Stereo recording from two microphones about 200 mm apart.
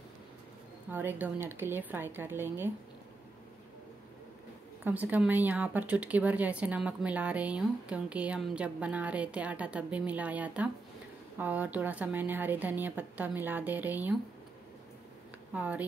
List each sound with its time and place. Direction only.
0.8 s speech: 10° right (ahead or behind)
4.8 s speech: 10° right (ahead or behind)
15.5 s speech: 5° right (ahead or behind)